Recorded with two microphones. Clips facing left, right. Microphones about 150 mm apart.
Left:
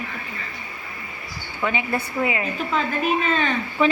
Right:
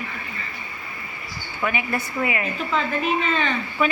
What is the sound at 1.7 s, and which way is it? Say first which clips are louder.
Speech: left 1 dB; 20° left (ahead or behind).